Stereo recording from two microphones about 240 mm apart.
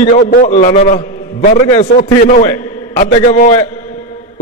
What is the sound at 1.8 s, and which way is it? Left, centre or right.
A man's voice, left.